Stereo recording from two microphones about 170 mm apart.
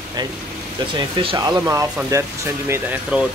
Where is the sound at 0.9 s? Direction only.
25° right (ahead or behind).